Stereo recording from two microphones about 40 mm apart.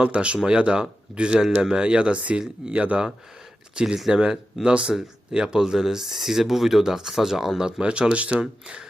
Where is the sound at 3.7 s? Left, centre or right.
Centre.